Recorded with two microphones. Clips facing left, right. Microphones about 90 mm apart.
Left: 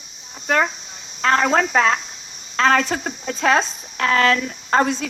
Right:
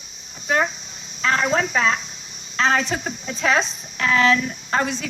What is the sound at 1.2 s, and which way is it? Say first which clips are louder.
A woman's voice: left 3 dB; 50° left (ahead or behind).